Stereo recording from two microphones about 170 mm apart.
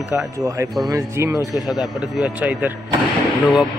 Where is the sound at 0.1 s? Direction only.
10° right (ahead or behind).